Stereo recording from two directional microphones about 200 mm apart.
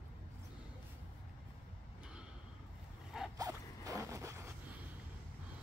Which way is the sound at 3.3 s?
15° right (ahead or behind).